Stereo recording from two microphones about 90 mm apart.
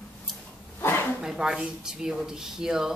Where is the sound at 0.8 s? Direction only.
25° left (ahead or behind).